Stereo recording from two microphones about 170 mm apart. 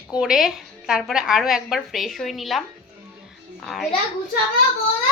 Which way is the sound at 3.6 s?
Centre (ahead or behind).